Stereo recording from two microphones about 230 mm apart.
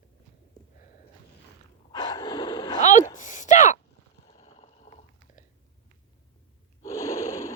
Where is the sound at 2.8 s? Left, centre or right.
Left.